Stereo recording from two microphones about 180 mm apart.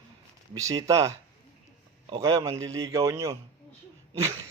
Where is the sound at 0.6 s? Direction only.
20° right (ahead or behind).